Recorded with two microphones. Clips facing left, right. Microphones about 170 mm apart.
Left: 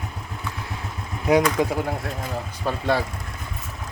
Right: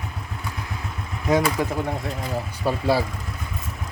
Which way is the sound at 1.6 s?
20° left (ahead or behind).